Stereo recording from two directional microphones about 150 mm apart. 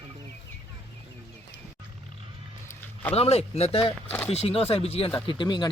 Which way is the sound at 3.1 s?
45° left (ahead or behind).